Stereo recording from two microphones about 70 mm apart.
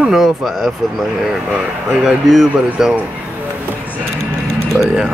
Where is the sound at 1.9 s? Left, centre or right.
Centre.